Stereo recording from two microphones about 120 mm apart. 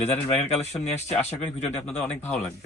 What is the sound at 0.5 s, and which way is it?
Speech, 65° left (ahead or behind).